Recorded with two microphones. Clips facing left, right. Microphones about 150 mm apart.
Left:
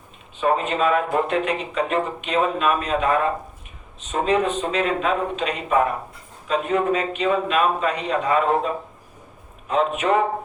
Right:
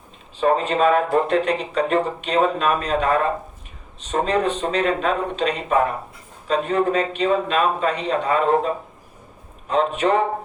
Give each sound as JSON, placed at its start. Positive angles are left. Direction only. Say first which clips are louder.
{"t": 0.3, "sound": "speech", "louder": "right 2 dB", "side_deg": -35}